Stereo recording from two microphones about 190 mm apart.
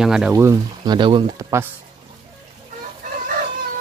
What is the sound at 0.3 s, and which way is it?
Speech, 15° right (ahead or behind).